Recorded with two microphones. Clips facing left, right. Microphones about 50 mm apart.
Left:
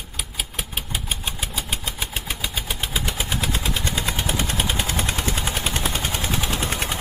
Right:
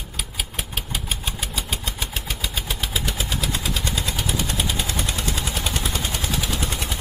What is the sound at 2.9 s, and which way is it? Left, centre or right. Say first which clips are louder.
Vehicle: left 2 dB; left.